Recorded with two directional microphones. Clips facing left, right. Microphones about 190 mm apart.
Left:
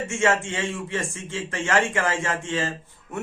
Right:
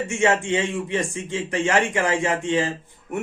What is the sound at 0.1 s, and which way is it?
Speech, 15° right (ahead or behind).